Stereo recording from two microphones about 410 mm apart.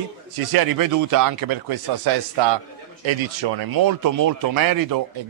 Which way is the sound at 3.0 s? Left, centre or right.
Right.